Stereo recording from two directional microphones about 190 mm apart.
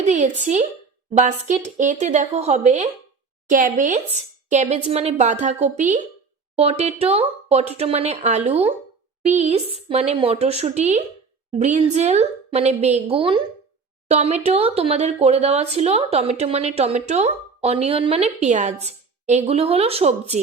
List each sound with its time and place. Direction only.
0.0 s speech: 40° right (ahead or behind)